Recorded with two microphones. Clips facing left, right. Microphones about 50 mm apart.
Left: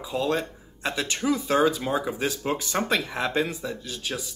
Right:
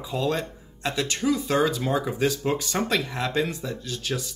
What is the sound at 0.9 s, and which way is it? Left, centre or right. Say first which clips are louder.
Speech: right 1 dB; centre.